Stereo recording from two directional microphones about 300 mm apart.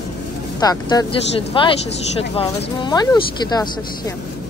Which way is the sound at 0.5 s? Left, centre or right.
Centre.